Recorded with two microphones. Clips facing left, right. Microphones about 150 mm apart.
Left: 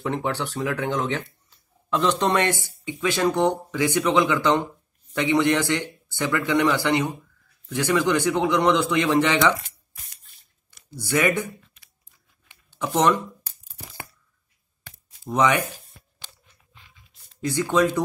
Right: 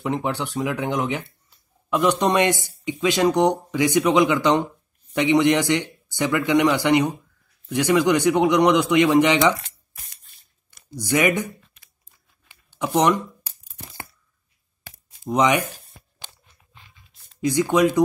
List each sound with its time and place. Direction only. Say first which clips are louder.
0.0 s speech: right 1 dB; 15° right (ahead or behind)
11.0 s speech: right 2 dB; 15° right (ahead or behind)
12.7 s speech: right 1 dB; 15° right (ahead or behind)
15.2 s speech: right 2 dB; 15° right (ahead or behind)
17.4 s speech: right 3 dB; 15° right (ahead or behind)